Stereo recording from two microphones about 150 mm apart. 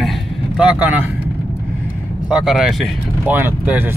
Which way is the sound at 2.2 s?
5° right (ahead or behind).